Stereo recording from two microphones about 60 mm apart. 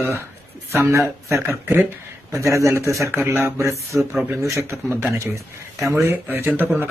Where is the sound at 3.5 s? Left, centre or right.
Right.